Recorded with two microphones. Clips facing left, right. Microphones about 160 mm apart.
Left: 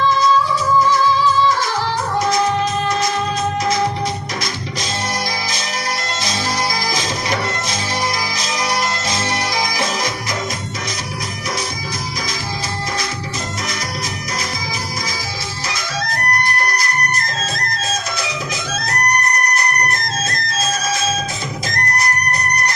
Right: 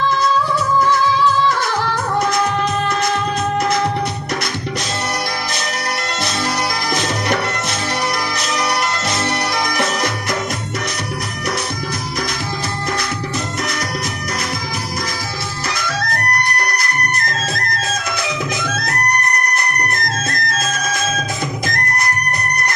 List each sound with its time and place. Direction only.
0.8 s music: 60° right (ahead or behind)
6.9 s music: 60° right (ahead or behind)
15.7 s music: 60° right (ahead or behind)